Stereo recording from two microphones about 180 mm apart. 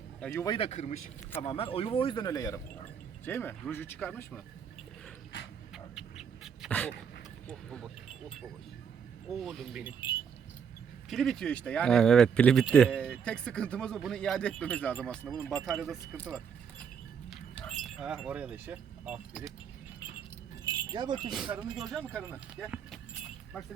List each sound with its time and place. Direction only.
0.2 s speech: 5° left (ahead or behind)
0.4 s speech: 30° left (ahead or behind)
1.4 s speech: 30° left (ahead or behind); by 4.4 s 10° left (ahead or behind)
5.7 s dog: 5° right (ahead or behind)
7.4 s speech: centre (ahead or behind)
11.1 s speech: centre (ahead or behind)
17.2 s keys jangling: centre (ahead or behind)
20.7 s wind chime: 25° right (ahead or behind)
21.2 s speech: 5° right (ahead or behind)